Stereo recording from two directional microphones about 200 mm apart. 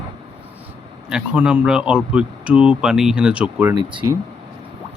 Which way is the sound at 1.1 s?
5° right (ahead or behind).